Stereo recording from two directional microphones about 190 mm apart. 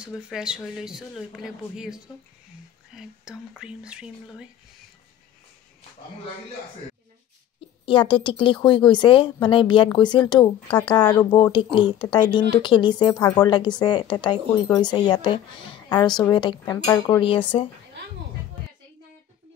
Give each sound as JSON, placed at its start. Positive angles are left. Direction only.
{"t": 0.0, "sound": "speech", "side_deg": -5}
{"t": 3.0, "sound": "speech", "side_deg": -5}
{"t": 7.8, "sound": "speech", "side_deg": 25}